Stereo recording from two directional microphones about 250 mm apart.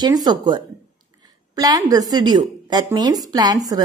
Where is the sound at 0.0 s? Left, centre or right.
Centre.